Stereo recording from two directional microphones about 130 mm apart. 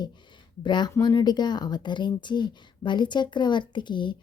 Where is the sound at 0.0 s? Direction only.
35° left (ahead or behind).